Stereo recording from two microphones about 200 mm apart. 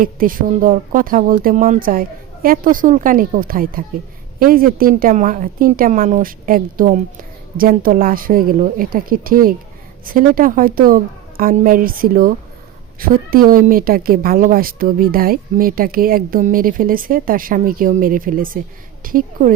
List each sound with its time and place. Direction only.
0.0 s a woman's voice: 45° right (ahead or behind)